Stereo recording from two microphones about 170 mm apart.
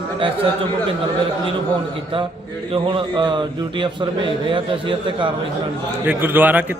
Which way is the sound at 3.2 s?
25° right (ahead or behind).